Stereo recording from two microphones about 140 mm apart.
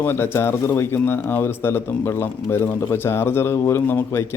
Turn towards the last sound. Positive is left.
turn(degrees=15)  # may be behind; listen again after turning